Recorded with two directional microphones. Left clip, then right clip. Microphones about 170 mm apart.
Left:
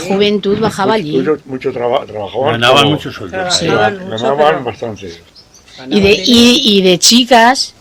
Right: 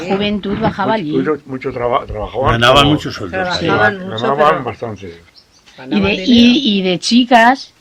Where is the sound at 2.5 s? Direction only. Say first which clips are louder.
Even; 55° right (ahead or behind).